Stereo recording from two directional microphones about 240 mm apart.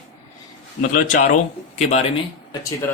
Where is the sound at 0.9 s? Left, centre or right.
Left.